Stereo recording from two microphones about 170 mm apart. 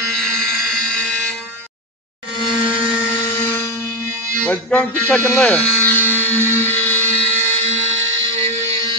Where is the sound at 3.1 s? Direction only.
15° left (ahead or behind).